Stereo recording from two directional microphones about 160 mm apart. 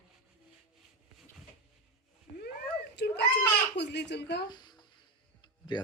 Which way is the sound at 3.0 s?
90° left.